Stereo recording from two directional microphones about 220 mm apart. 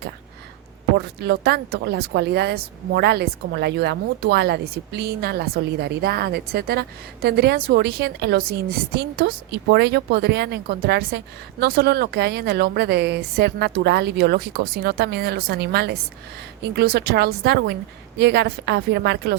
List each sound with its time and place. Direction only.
0.9 s speech: 50° right (ahead or behind)